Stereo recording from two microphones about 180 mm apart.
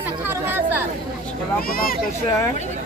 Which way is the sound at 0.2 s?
10° right (ahead or behind).